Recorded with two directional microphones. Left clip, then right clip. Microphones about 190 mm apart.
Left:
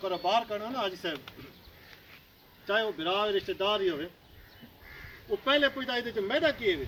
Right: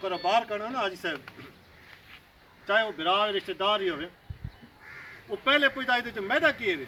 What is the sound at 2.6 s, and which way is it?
Speech, 10° right (ahead or behind).